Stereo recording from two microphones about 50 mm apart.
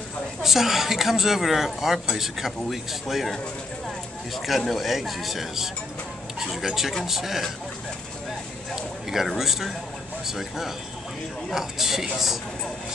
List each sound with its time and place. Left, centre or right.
0.4 s speech: centre
4.4 s speech: centre
8.7 s a sound: centre
9.4 s speech: centre